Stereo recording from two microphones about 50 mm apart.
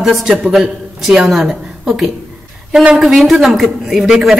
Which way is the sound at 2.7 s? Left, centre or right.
Centre.